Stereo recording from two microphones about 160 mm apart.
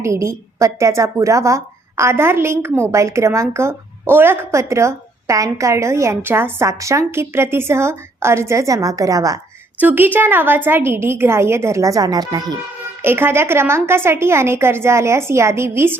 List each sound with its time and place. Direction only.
0.0 s speech: 20° right (ahead or behind)
13.0 s speech: 15° right (ahead or behind)